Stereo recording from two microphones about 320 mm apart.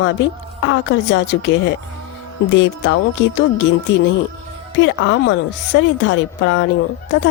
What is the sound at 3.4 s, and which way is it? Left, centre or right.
Speech, left.